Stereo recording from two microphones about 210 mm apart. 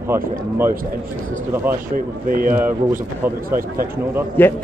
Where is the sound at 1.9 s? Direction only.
40° right (ahead or behind).